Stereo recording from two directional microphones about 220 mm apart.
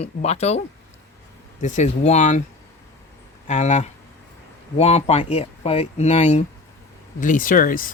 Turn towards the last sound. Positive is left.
turn(degrees=40)  # may be behind; listen again after turning